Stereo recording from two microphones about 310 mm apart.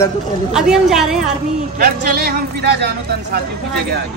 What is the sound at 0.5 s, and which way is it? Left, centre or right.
Speech, centre.